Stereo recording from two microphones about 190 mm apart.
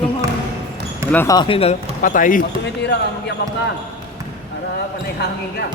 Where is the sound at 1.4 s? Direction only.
30° left (ahead or behind).